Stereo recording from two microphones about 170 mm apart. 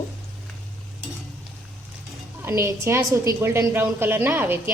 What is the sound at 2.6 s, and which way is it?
A woman's voice, 15° right (ahead or behind).